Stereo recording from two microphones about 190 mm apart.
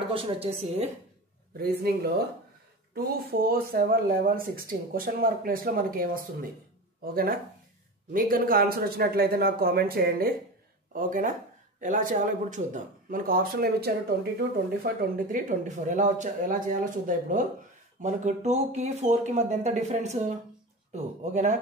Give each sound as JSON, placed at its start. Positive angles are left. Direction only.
{"t": 0.1, "sound": "speech", "side_deg": -30}
{"t": 1.6, "sound": "speech", "side_deg": -55}
{"t": 8.1, "sound": "speech", "side_deg": -50}